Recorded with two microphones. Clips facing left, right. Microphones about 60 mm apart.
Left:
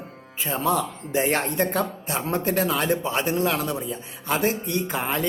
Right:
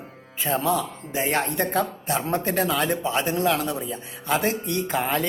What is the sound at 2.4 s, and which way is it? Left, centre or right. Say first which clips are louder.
Speech: left 1 dB; right.